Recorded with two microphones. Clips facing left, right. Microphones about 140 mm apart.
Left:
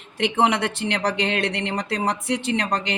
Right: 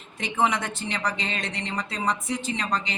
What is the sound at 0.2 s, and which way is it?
Speech, 70° left (ahead or behind).